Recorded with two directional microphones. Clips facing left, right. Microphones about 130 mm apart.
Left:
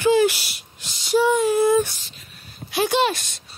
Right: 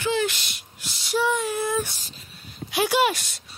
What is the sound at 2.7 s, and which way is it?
Speech, 10° right (ahead or behind).